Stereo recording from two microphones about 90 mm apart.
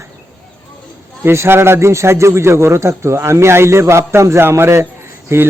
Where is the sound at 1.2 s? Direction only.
30° right (ahead or behind).